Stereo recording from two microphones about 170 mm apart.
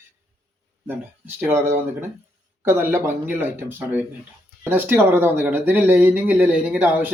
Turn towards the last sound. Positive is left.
turn(degrees=-10)  # may be behind; listen again after turning